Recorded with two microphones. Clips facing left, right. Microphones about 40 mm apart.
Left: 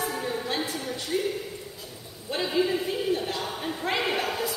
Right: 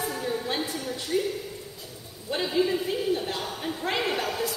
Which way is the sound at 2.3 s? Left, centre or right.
Centre.